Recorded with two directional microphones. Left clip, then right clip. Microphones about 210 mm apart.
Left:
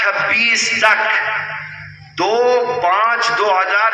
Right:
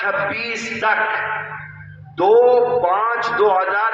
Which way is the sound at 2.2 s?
25° right (ahead or behind).